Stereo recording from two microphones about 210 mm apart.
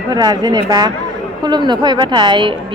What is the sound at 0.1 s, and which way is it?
A woman's voice, 20° right (ahead or behind).